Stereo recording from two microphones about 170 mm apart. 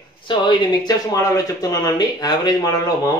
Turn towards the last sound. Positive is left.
turn(degrees=20)  # may be behind; listen again after turning